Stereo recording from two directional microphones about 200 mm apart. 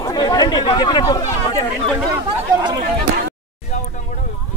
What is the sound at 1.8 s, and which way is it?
Speech, centre (ahead or behind).